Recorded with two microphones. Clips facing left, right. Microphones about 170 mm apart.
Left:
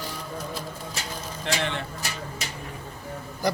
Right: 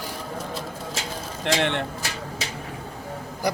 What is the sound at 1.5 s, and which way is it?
Speech, 75° right (ahead or behind).